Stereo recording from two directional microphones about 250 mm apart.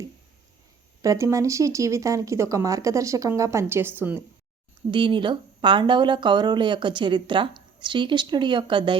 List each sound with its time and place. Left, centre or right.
1.0 s speech: centre
4.9 s speech: centre